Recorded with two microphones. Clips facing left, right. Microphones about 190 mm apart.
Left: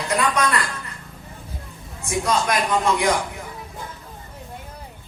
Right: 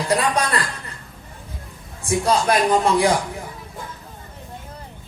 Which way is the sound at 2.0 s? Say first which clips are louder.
Right 3 dB; 35° right (ahead or behind).